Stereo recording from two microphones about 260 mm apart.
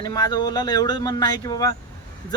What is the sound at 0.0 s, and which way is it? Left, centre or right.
Speech, centre.